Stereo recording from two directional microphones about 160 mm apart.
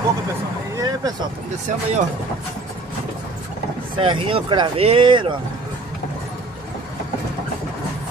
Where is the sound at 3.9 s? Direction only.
30° right (ahead or behind).